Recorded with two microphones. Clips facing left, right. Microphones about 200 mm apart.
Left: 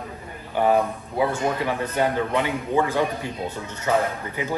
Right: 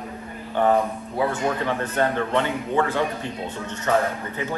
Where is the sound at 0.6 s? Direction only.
10° left (ahead or behind).